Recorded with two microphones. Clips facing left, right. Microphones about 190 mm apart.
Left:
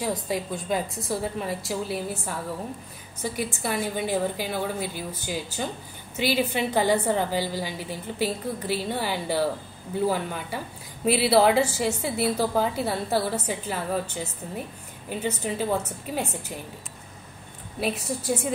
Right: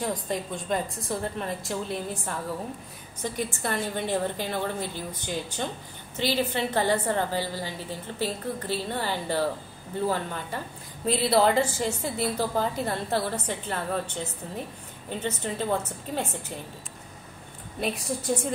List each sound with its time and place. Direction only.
0.0 s a woman's voice: 5° left (ahead or behind)
17.7 s a woman's voice: 5° left (ahead or behind)